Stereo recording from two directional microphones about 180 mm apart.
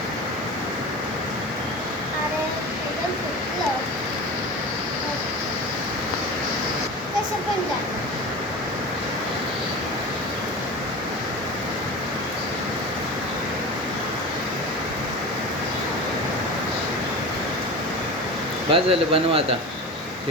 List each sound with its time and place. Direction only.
18.7 s a man's voice: 30° right (ahead or behind)